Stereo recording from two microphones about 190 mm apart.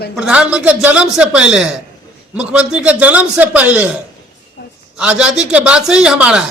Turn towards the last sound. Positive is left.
turn(degrees=-5)  # may be behind; listen again after turning